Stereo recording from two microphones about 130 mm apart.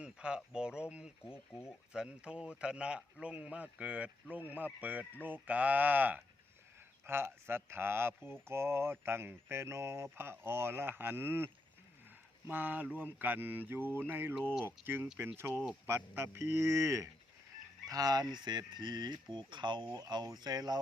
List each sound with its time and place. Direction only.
0.0 s speech: 5° right (ahead or behind)
1.3 s speech: 20° left (ahead or behind)
1.9 s speech: 5° right (ahead or behind); by 20.7 s 30° right (ahead or behind)